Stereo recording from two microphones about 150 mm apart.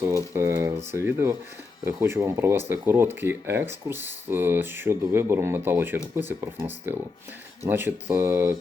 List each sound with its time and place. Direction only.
0.0 s speech: 20° right (ahead or behind)